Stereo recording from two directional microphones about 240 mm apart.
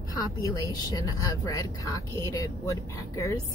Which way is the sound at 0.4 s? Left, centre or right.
Centre.